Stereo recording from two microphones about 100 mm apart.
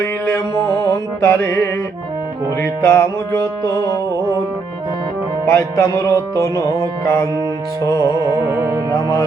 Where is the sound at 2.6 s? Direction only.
25° left (ahead or behind).